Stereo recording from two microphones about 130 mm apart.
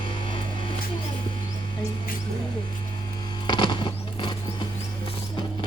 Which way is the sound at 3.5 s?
35° left (ahead or behind).